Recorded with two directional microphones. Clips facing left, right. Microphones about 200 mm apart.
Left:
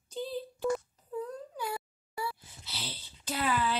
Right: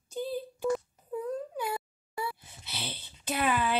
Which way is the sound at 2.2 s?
15° right (ahead or behind).